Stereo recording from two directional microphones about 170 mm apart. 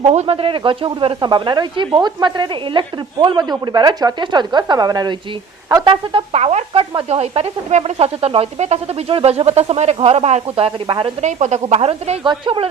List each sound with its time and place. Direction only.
0.0 s speech: 40° right (ahead or behind)
11.2 s speech: 45° right (ahead or behind)